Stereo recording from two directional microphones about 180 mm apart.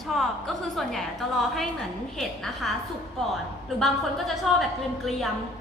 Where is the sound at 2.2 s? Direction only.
Centre (ahead or behind).